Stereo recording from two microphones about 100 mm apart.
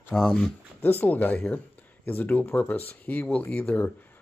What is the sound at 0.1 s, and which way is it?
Speech, 5° left (ahead or behind).